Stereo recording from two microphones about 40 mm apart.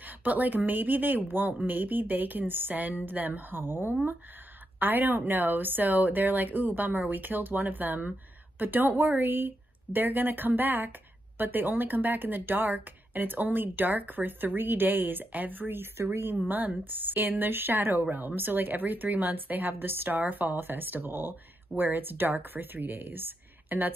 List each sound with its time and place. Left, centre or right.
0.0 s a woman's voice: right
3.6 s speech: right
4.7 s a woman's voice: right
15.8 s speech: right
16.3 s a woman's voice: right
20.2 s a woman's voice: right